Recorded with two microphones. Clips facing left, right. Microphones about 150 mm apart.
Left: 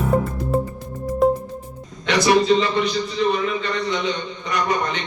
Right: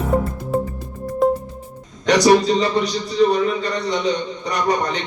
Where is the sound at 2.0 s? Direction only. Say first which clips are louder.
Right 3 dB; 40° right (ahead or behind).